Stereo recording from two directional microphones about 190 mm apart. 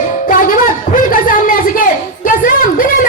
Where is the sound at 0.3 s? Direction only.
45° left (ahead or behind).